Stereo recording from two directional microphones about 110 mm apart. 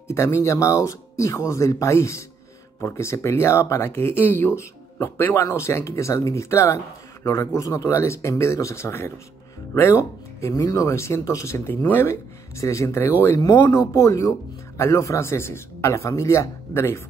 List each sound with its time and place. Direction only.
0.1 s speech: 25° left (ahead or behind)
10.4 s speech: 30° left (ahead or behind)